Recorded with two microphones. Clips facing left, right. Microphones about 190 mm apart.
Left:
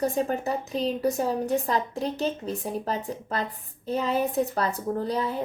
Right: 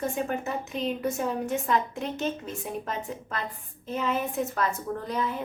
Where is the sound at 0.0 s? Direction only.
35° left (ahead or behind).